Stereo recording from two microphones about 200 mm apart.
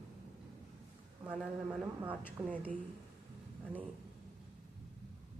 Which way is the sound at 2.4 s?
15° right (ahead or behind).